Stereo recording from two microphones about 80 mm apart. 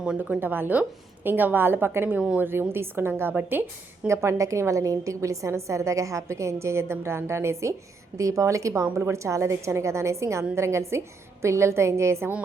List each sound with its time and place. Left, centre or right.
0.2 s a woman's voice: right
2.1 s a woman's voice: centre
2.5 s a woman's voice: right